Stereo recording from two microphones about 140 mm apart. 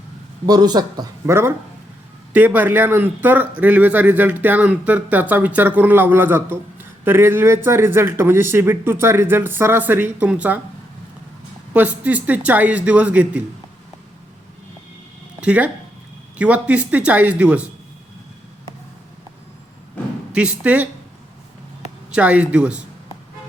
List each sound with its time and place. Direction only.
0.4 s speech: 30° right (ahead or behind); by 10.6 s 10° right (ahead or behind)
11.7 s speech: 10° right (ahead or behind)
15.4 s speech: 10° right (ahead or behind)
20.0 s a sound: 10° left (ahead or behind)
20.3 s speech: 10° right (ahead or behind)
22.1 s speech: 10° right (ahead or behind)